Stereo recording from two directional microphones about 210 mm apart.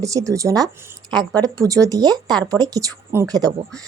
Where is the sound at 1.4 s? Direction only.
15° right (ahead or behind).